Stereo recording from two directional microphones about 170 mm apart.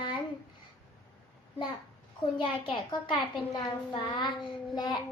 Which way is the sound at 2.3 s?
30° left (ahead or behind).